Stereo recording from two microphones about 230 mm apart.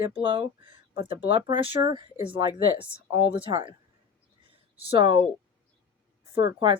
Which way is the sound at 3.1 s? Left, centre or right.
Left.